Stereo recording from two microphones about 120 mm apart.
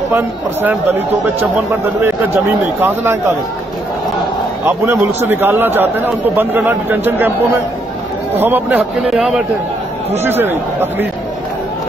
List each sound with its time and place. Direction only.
0.1 s a man's voice: 15° right (ahead or behind)
2.3 s a man's voice: 20° right (ahead or behind)
4.6 s a man's voice: 20° right (ahead or behind)
8.4 s a man's voice: 15° right (ahead or behind)
9.1 s speech: centre (ahead or behind)
10.1 s a man's voice: 20° right (ahead or behind)